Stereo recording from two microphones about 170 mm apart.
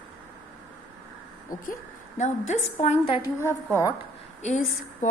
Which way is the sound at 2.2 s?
45° left (ahead or behind).